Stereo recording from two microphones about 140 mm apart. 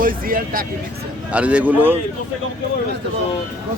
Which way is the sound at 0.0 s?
90° right.